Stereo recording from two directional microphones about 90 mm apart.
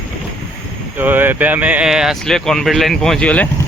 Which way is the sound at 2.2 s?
5° left (ahead or behind).